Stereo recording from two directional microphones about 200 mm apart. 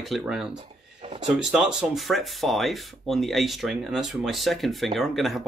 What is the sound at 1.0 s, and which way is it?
Speech, 30° right (ahead or behind).